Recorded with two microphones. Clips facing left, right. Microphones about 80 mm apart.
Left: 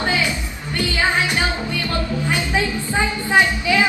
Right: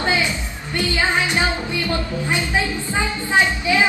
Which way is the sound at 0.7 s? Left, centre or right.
Right.